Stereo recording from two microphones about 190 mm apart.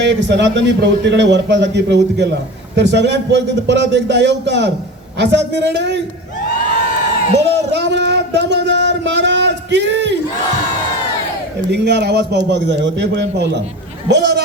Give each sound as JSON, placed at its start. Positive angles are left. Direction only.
{"t": 0.0, "sound": "a man's voice", "side_deg": -70}
{"t": 7.7, "sound": "a sound", "side_deg": -65}
{"t": 11.7, "sound": "a man's voice", "side_deg": -60}